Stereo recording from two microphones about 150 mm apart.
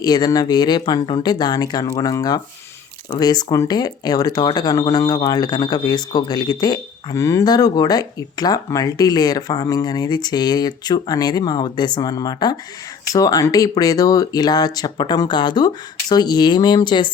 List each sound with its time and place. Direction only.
0.0 s speech: 25° left (ahead or behind)